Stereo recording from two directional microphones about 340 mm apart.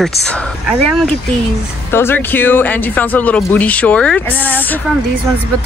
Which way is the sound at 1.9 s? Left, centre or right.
Centre.